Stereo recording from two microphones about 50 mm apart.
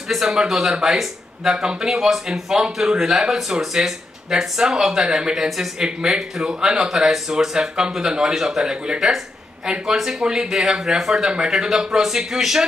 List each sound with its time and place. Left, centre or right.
0.1 s speech: centre
2.6 s speech: centre
3.0 s speech: centre